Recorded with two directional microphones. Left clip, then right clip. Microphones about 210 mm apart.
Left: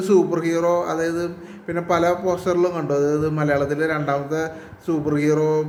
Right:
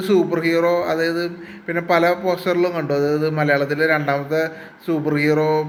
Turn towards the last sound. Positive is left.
turn(degrees=0)  # may be behind; listen again after turning